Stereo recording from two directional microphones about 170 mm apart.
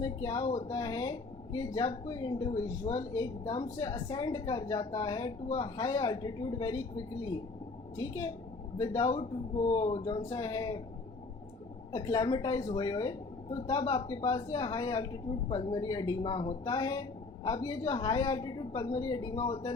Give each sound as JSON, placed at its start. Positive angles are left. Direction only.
{"t": 0.0, "sound": "a woman's voice", "side_deg": 20}
{"t": 11.9, "sound": "a woman's voice", "side_deg": 25}